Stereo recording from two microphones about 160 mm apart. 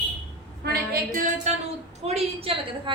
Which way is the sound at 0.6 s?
75° right (ahead or behind).